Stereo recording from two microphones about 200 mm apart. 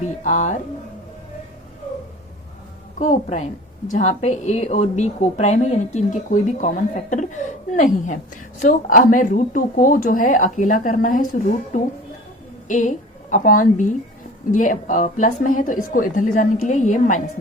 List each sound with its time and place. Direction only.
0.0 s a woman's voice: 40° left (ahead or behind)
3.0 s a woman's voice: 35° left (ahead or behind)